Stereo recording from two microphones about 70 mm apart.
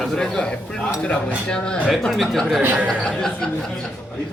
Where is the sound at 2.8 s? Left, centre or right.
Centre.